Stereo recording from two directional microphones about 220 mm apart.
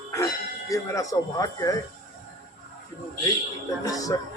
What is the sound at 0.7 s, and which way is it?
Speech, 15° left (ahead or behind).